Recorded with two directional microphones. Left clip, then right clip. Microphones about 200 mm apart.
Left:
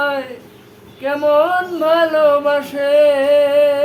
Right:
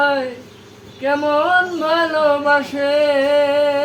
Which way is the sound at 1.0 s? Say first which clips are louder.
Left 2 dB; 15° left (ahead or behind).